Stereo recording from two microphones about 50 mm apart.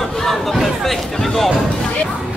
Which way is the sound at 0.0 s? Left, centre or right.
Centre.